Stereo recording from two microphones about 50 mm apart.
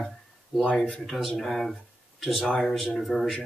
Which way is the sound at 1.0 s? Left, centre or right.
Centre.